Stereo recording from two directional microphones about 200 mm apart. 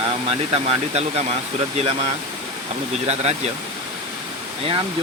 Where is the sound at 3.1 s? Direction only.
30° right (ahead or behind).